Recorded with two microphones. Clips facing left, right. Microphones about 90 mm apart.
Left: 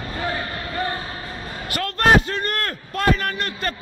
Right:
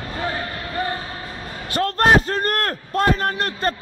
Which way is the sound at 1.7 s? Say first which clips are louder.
Right 1 dB; 35° right (ahead or behind).